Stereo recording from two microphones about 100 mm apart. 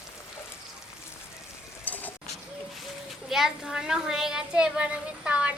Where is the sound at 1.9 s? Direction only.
15° left (ahead or behind).